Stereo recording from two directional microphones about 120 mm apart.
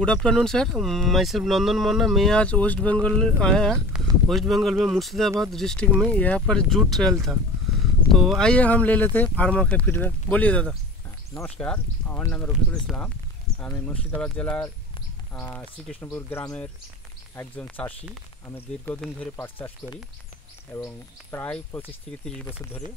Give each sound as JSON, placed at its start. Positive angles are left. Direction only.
{"t": 0.0, "sound": "speech", "side_deg": 5}
{"t": 17.6, "sound": "speech", "side_deg": 15}
{"t": 18.9, "sound": "speech", "side_deg": 5}
{"t": 20.7, "sound": "speech", "side_deg": 20}